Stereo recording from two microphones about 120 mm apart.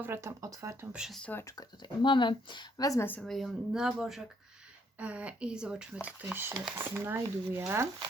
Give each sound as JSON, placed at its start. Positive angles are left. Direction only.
{"t": 0.0, "sound": "speech", "side_deg": -20}
{"t": 0.9, "sound": "speech", "side_deg": -5}
{"t": 1.2, "sound": "speech", "side_deg": 15}
{"t": 1.5, "sound": "speech", "side_deg": 35}
{"t": 3.2, "sound": "speech", "side_deg": 0}